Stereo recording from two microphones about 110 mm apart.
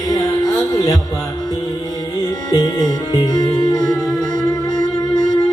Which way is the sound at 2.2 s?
35° left (ahead or behind).